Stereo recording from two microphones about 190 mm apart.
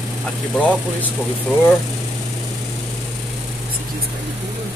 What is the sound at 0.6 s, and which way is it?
Speech, 5° left (ahead or behind).